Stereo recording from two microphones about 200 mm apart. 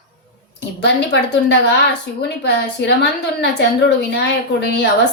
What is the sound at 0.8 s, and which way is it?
Speech, 60° left (ahead or behind).